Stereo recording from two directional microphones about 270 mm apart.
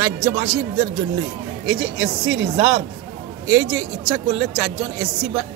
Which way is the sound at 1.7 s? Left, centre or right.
Right.